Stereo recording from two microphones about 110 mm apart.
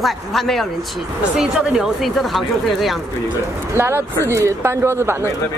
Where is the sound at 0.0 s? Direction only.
Centre (ahead or behind).